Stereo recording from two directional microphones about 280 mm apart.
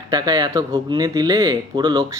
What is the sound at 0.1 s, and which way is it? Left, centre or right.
Speech, centre.